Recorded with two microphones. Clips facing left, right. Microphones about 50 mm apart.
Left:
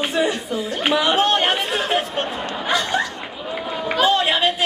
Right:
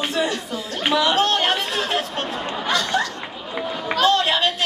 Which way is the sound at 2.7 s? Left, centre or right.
Centre.